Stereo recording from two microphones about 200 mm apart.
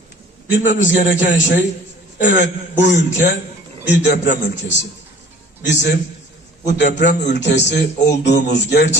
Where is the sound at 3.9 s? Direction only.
60° left (ahead or behind).